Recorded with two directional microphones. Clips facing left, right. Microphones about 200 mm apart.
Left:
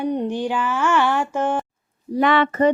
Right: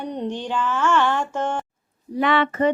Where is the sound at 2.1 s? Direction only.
45° left (ahead or behind).